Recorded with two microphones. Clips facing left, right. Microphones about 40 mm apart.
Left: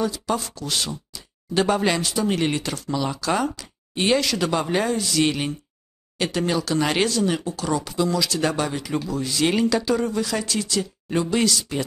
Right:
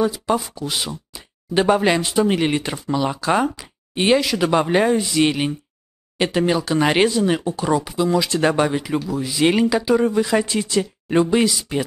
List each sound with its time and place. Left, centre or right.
0.0 s speech: centre
4.5 s speech: right
8.9 s speech: centre